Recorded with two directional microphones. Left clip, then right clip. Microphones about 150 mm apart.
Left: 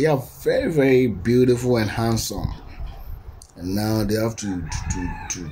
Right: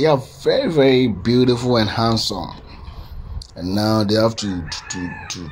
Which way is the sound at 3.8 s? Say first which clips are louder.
Right 6 dB; 20° right (ahead or behind).